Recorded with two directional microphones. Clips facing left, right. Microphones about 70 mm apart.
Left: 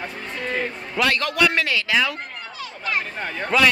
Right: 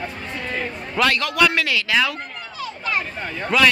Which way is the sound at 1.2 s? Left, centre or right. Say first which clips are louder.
Right 1 dB; left.